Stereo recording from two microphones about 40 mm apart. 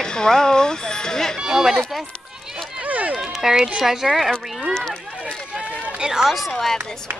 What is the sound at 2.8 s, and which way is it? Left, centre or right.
Run, right.